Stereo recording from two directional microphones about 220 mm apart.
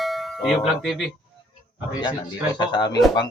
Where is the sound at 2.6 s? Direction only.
20° left (ahead or behind).